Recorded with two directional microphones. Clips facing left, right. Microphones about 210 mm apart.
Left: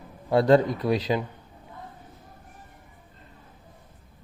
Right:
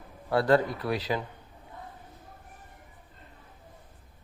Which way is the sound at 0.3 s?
20° left (ahead or behind).